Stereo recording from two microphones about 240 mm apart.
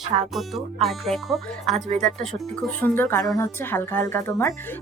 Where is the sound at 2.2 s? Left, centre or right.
Centre.